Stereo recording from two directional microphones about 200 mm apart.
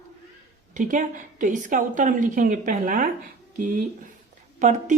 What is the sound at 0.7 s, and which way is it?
Speech, 40° right (ahead or behind).